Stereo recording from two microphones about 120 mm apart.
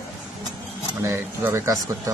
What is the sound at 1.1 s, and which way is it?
A man's voice, 20° right (ahead or behind).